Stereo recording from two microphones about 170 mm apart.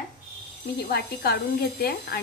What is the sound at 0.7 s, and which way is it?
Speech, 65° left (ahead or behind).